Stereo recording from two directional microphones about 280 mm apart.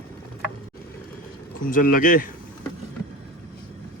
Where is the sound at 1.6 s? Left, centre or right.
Left.